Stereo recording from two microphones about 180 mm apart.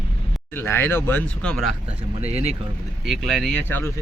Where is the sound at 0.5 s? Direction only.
10° left (ahead or behind).